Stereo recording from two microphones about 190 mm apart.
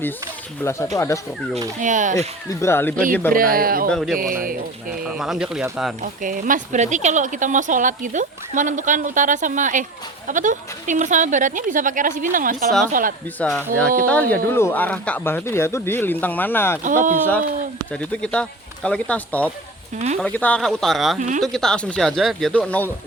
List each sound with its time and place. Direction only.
0.6 s speech: 15° left (ahead or behind)
1.8 s speech: 40° right (ahead or behind)
2.5 s speech: 15° left (ahead or behind)
3.3 s speech: 50° right (ahead or behind)
3.9 s speech: centre (ahead or behind)
4.2 s speech: 45° right (ahead or behind)
5.0 s speech: 5° right (ahead or behind)
6.0 s speech: 45° right (ahead or behind)
13.4 s speech: 5° left (ahead or behind)
16.8 s speech: 45° right (ahead or behind)
17.9 s speech: 5° left (ahead or behind)
21.2 s speech: 40° right (ahead or behind)
21.4 s speech: centre (ahead or behind)